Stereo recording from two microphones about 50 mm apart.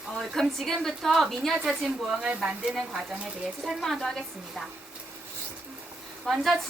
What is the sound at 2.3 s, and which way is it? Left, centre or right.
Speech, right.